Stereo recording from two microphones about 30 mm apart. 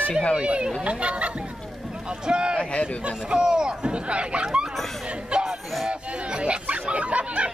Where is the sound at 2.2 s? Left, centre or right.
Right.